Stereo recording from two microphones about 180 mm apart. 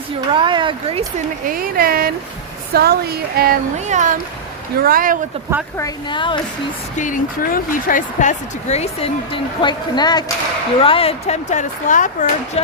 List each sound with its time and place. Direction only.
0.3 s speech: 25° right (ahead or behind)
1.5 s speech: 55° right (ahead or behind)
3.8 s speech: 40° right (ahead or behind)
4.8 s speech: 55° right (ahead or behind)
5.7 s a woman's voice: 20° left (ahead or behind)
6.9 s speech: 45° left (ahead or behind)